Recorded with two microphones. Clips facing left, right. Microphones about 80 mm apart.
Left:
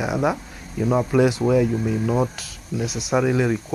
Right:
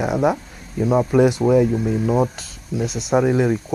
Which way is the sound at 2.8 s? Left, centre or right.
Centre.